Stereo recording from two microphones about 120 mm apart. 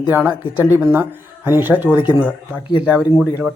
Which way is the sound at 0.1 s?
15° right (ahead or behind).